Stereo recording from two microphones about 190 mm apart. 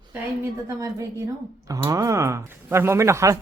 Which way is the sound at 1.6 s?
20° right (ahead or behind).